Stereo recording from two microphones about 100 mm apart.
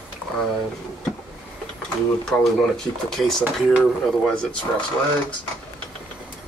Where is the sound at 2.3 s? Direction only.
10° left (ahead or behind).